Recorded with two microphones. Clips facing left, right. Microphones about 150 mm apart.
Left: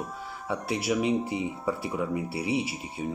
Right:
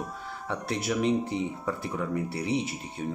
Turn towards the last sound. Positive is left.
turn(degrees=5)  # may be behind; listen again after turning